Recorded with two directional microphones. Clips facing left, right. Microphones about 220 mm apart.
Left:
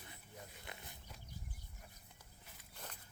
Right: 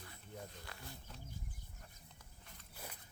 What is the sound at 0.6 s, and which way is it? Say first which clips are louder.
Wild animals: right 1 dB; 20° left (ahead or behind).